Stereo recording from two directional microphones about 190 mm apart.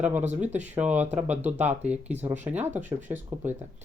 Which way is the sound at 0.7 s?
10° right (ahead or behind).